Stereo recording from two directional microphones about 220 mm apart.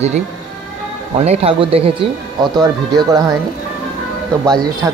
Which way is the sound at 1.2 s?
25° right (ahead or behind).